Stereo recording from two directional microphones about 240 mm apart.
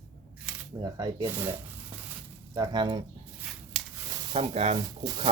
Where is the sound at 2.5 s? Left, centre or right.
Centre.